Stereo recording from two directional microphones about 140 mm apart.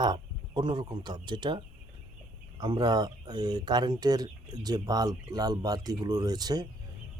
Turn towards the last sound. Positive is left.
turn(degrees=-30)  # may be behind; listen again after turning